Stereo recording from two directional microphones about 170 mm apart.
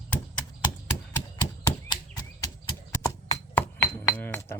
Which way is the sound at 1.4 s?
20° left (ahead or behind).